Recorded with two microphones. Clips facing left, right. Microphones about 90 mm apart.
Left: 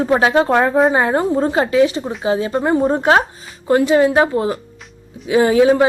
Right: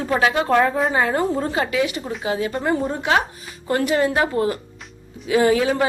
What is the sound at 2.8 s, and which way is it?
Speech, 40° left (ahead or behind).